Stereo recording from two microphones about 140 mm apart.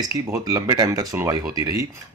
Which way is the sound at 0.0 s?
25° right (ahead or behind).